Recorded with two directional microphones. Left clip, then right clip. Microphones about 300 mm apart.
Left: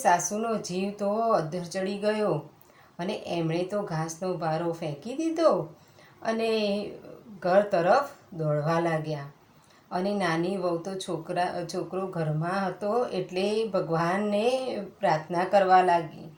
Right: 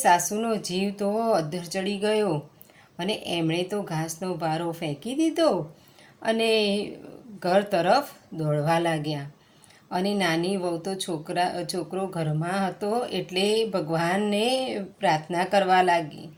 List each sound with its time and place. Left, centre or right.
0.0 s a woman's voice: right